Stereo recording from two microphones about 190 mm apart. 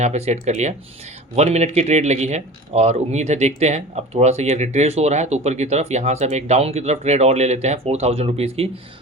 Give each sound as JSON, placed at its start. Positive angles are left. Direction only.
{"t": 0.0, "sound": "speech", "side_deg": -35}